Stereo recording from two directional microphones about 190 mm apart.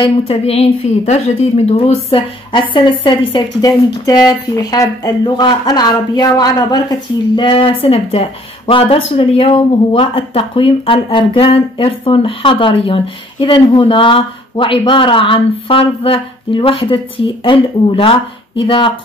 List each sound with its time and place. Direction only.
0.0 s a woman's voice: 30° left (ahead or behind)